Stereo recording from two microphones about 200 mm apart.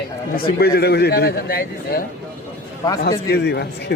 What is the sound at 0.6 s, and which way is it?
A man's voice, 55° left (ahead or behind).